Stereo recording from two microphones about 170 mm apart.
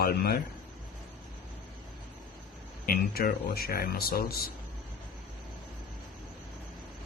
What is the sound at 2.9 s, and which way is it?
Speech, 60° left (ahead or behind).